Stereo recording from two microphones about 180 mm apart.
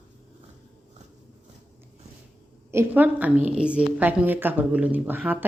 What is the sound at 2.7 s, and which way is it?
A woman's voice, 10° right (ahead or behind).